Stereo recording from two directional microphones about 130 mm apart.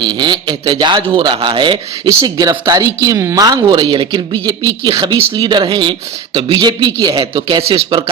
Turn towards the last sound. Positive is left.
turn(degrees=-40)  # may be behind; listen again after turning